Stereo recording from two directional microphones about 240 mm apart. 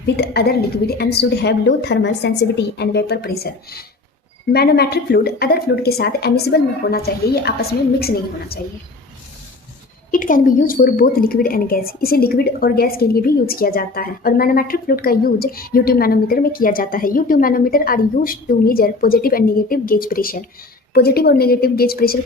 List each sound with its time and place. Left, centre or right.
0.2 s a woman's voice: left
10.1 s a woman's voice: left